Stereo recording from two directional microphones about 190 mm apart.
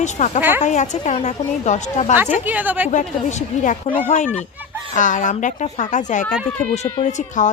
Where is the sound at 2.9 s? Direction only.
40° left (ahead or behind).